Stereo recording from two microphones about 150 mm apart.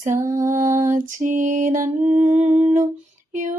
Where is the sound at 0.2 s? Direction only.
20° right (ahead or behind).